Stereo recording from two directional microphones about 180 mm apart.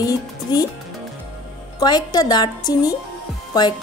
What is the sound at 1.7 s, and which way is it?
A woman's voice, 20° left (ahead or behind).